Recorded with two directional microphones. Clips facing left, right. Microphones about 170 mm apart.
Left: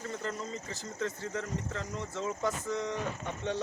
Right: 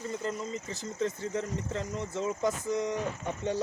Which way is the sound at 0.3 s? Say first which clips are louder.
Right 3 dB; 20° right (ahead or behind).